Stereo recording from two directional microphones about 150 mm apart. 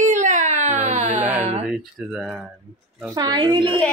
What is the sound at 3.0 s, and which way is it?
Speech, 25° right (ahead or behind).